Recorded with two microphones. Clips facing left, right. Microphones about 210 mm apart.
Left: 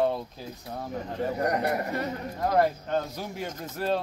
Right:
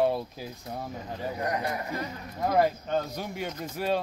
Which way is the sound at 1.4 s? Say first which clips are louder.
Left 3 dB; 60° left (ahead or behind).